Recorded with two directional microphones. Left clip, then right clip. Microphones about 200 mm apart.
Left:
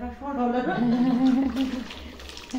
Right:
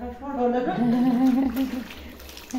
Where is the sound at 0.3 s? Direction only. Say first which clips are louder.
Even; 25° right (ahead or behind).